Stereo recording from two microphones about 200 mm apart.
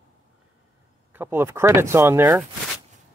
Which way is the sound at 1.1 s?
10° right (ahead or behind).